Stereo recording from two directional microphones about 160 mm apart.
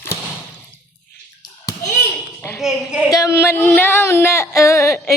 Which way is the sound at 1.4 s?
20° left (ahead or behind).